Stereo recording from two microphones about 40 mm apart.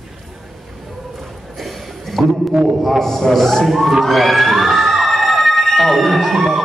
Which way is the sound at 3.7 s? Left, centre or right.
Centre.